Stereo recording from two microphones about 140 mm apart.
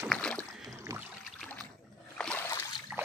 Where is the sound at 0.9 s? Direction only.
25° right (ahead or behind).